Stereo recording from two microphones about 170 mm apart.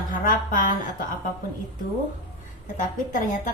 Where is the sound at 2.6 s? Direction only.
50° left (ahead or behind).